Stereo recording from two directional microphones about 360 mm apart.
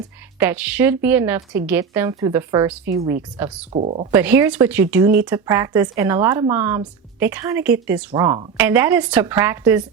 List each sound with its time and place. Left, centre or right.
0.3 s a woman's voice: centre
3.7 s speech: centre
4.1 s a woman's voice: centre